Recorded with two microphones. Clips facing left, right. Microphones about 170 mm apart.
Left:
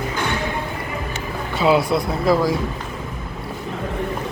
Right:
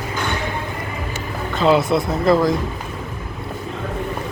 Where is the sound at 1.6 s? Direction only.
5° left (ahead or behind).